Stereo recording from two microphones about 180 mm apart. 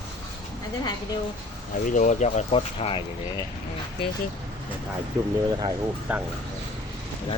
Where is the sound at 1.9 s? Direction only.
45° left (ahead or behind).